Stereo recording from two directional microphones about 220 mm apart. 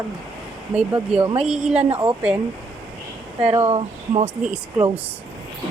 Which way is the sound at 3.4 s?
20° right (ahead or behind).